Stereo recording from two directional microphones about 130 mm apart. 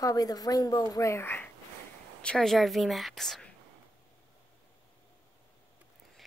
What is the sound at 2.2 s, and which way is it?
A woman's voice, 5° left (ahead or behind).